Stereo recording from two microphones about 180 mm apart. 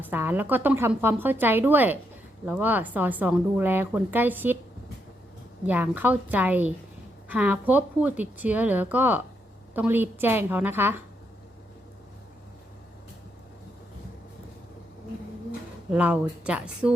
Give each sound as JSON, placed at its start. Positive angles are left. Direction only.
{"t": 0.0, "sound": "a woman's voice", "side_deg": -10}
{"t": 5.6, "sound": "a woman's voice", "side_deg": -10}
{"t": 15.9, "sound": "a woman's voice", "side_deg": -5}